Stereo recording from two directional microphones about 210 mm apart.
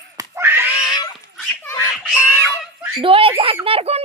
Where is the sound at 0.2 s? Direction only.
10° right (ahead or behind).